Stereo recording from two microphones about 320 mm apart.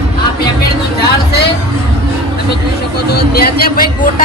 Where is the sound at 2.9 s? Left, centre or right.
Left.